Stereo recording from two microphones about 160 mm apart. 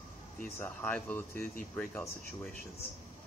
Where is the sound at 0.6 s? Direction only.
10° left (ahead or behind).